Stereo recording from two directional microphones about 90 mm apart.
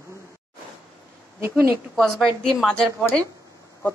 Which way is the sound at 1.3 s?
30° right (ahead or behind).